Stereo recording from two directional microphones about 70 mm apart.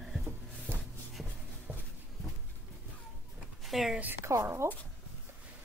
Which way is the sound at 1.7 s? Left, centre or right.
Right.